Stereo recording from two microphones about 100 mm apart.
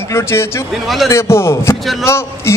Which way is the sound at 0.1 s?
25° left (ahead or behind).